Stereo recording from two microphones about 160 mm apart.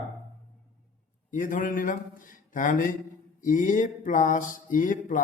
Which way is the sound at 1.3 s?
55° left (ahead or behind).